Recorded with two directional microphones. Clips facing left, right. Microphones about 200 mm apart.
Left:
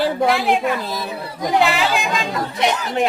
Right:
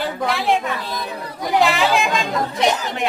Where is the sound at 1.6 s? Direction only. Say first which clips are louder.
Right 3 dB; centre (ahead or behind).